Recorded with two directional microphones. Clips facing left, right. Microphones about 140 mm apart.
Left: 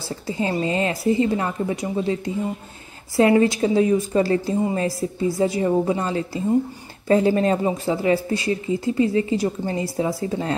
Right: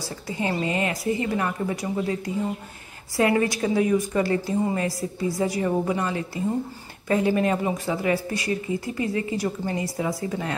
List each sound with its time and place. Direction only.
0.0 s a woman's voice: 25° left (ahead or behind)